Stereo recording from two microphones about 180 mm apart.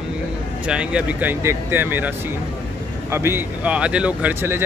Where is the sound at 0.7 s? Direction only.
5° right (ahead or behind).